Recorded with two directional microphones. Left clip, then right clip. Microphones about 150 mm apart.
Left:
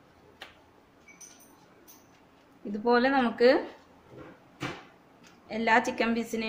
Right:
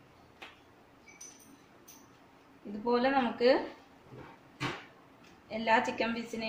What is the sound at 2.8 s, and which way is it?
Speech, 40° left (ahead or behind).